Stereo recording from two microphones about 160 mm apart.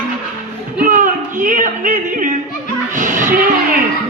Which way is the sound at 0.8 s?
55° right (ahead or behind).